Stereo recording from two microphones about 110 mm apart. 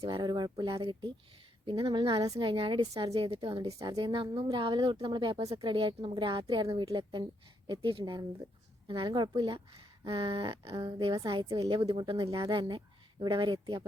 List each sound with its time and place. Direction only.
0.0 s a woman's voice: 45° right (ahead or behind)
3.1 s a sound: 60° right (ahead or behind)
3.8 s a woman's voice: 40° right (ahead or behind)
6.6 s a woman's voice: 35° right (ahead or behind)
10.0 s a sound: 55° right (ahead or behind)
10.8 s a woman's voice: 35° right (ahead or behind)